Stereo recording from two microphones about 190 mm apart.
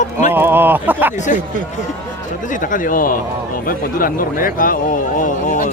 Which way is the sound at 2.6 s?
45° left (ahead or behind).